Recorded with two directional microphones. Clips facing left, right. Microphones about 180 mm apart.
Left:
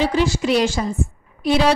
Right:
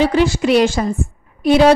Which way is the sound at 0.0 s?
60° right (ahead or behind).